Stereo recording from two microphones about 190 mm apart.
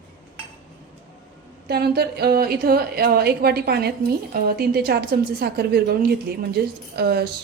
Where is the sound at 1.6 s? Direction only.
55° right (ahead or behind).